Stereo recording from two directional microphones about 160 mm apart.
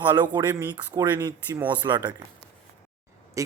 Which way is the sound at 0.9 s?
25° right (ahead or behind).